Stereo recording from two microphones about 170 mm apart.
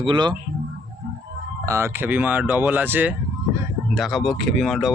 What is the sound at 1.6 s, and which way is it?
Speech, 15° right (ahead or behind).